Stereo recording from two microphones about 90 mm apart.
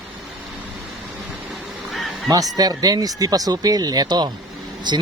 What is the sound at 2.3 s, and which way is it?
Speech, 45° right (ahead or behind).